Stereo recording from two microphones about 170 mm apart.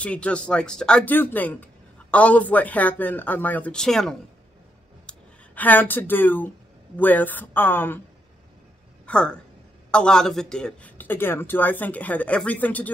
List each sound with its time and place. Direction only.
0.0 s speech: 5° left (ahead or behind)
9.0 s a woman's voice: 5° left (ahead or behind)